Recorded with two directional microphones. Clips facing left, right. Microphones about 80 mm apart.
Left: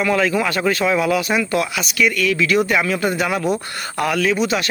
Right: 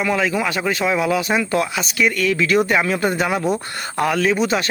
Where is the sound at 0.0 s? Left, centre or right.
Centre.